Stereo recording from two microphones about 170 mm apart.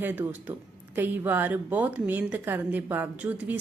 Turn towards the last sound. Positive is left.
turn(degrees=-10)  # may be behind; listen again after turning